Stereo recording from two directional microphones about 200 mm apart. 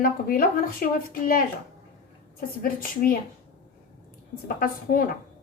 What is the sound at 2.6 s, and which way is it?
Speech, 45° left (ahead or behind).